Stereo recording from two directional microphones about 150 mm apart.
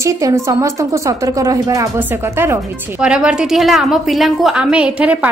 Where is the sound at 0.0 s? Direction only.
20° right (ahead or behind).